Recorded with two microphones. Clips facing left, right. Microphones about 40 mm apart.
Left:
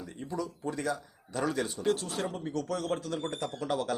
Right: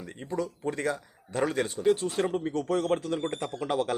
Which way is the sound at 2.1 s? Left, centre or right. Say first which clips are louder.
Right 5 dB; right.